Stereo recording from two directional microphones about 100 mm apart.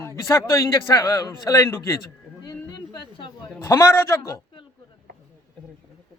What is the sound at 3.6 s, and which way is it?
Speech, 30° left (ahead or behind).